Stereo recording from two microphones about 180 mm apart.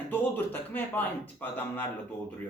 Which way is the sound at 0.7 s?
10° left (ahead or behind).